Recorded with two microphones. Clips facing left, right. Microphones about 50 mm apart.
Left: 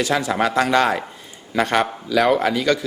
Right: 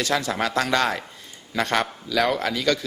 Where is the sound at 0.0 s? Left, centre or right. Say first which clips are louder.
Left 4 dB; centre.